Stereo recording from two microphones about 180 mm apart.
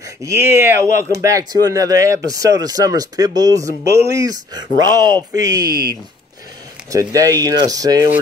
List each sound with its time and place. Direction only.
0.0 s speech: 15° right (ahead or behind)
6.9 s speech: 20° right (ahead or behind)